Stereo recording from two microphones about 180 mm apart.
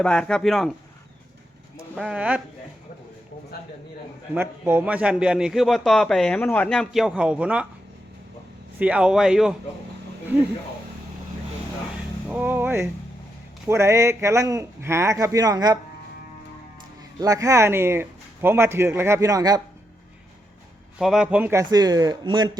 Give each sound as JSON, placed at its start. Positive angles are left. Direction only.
{"t": 0.0, "sound": "a man's voice", "side_deg": 5}
{"t": 2.0, "sound": "a man's voice", "side_deg": -5}
{"t": 4.4, "sound": "a man's voice", "side_deg": -10}
{"t": 8.8, "sound": "a man's voice", "side_deg": -5}
{"t": 12.3, "sound": "a man's voice", "side_deg": -10}
{"t": 17.2, "sound": "a man's voice", "side_deg": -20}
{"t": 21.0, "sound": "speech", "side_deg": -5}